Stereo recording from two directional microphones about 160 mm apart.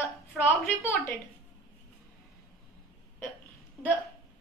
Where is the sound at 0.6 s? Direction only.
15° left (ahead or behind).